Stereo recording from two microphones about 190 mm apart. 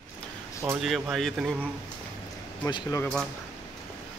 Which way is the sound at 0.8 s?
Centre (ahead or behind).